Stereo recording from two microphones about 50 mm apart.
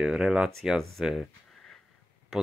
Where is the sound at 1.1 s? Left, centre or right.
Centre.